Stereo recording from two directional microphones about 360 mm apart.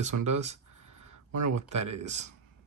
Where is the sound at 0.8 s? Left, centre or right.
Right.